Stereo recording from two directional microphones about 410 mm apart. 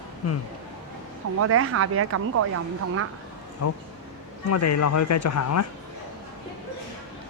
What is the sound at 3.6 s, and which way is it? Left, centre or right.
Speech, left.